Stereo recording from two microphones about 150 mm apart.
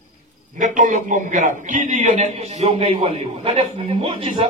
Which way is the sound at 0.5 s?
55° right (ahead or behind).